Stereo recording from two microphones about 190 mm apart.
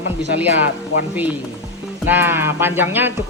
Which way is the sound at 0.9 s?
90° left.